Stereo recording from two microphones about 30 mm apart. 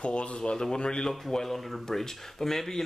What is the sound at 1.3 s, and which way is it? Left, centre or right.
Speech, centre.